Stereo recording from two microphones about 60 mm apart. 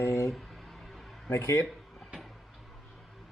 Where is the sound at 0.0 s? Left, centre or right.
Left.